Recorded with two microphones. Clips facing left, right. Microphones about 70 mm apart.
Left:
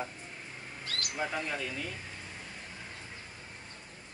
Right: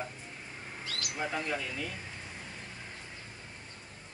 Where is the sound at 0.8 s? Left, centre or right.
Left.